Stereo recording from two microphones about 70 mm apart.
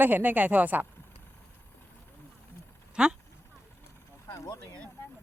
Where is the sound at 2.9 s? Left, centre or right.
Centre.